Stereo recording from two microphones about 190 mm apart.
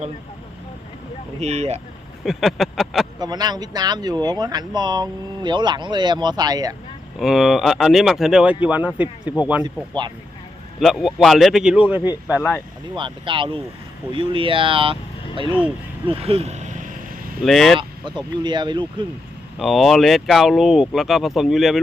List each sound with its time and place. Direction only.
1.4 s speech: 35° right (ahead or behind)
2.2 s speech: centre (ahead or behind)
3.2 s speech: 20° right (ahead or behind)
7.2 s speech: centre (ahead or behind)
10.8 s speech: centre (ahead or behind)
12.4 s speech: 10° left (ahead or behind)
13.0 s speech: 25° right (ahead or behind)
16.0 s speech: 30° right (ahead or behind)
17.4 s speech: centre (ahead or behind)
17.7 s speech: 25° right (ahead or behind)
19.5 s speech: centre (ahead or behind)